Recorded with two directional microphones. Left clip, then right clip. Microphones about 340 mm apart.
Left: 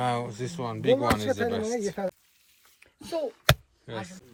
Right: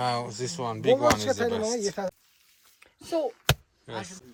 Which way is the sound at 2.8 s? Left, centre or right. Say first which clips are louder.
Right 1 dB; right.